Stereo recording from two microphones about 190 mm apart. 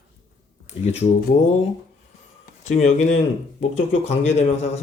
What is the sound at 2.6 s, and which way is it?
Speech, 40° left (ahead or behind).